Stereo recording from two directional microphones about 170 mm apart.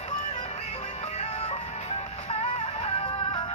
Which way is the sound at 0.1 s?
40° left (ahead or behind).